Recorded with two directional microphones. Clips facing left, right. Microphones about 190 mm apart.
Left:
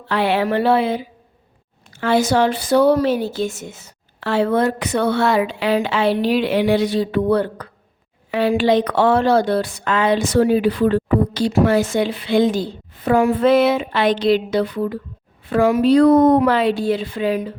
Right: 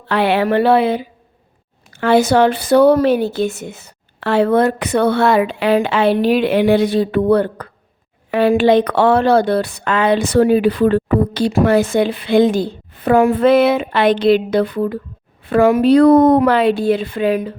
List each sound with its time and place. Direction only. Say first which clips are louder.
0.1 s a woman's voice: right 3 dB; 65° right (ahead or behind)